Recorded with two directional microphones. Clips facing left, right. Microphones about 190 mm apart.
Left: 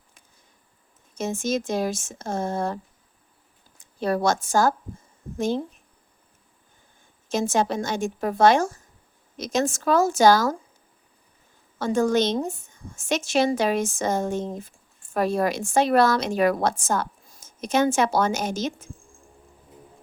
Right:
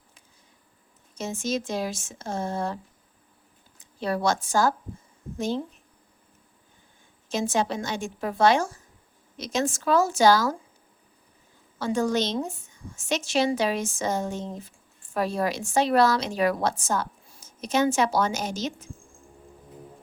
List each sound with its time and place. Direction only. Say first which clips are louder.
1.1 s a woman's voice: left 3 dB; 50° left (ahead or behind)
4.0 s a woman's voice: left 3 dB; 45° left (ahead or behind)
7.3 s a woman's voice: left 3 dB; 45° left (ahead or behind)
11.8 s a woman's voice: left 4 dB; 50° left (ahead or behind)